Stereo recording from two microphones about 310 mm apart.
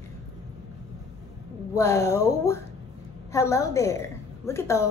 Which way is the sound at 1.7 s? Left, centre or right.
Centre.